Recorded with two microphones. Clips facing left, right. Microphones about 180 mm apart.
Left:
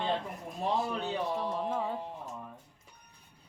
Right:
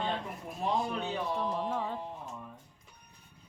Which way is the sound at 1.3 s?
5° left (ahead or behind).